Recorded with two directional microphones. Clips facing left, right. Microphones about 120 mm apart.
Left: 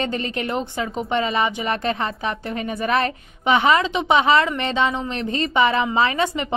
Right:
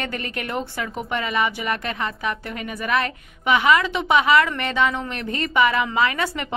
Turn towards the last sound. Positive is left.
turn(degrees=20)  # may be behind; listen again after turning